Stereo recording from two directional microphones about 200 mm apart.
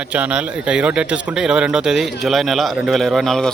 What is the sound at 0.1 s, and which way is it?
Speech, 5° right (ahead or behind).